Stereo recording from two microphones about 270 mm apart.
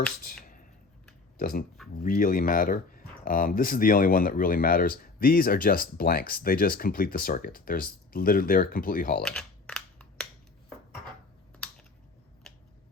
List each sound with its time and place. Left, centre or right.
0.3 s a sound: left
1.4 s speech: left
9.2 s computer keyboard: centre